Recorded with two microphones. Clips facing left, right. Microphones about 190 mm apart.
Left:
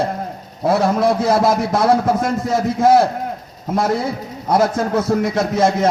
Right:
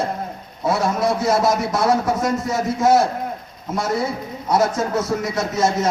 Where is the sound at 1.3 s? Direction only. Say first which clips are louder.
Left 3 dB; 55° left (ahead or behind).